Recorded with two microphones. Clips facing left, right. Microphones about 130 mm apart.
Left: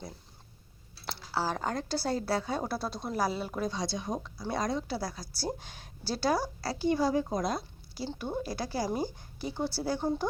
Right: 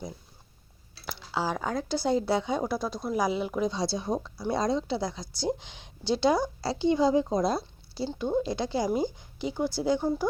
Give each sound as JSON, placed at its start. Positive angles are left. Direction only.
{"t": 1.0, "sound": "speech", "side_deg": -15}
{"t": 3.8, "sound": "a woman's voice", "side_deg": -30}